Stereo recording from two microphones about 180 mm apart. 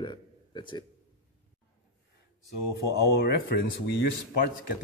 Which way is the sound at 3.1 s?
60° left (ahead or behind).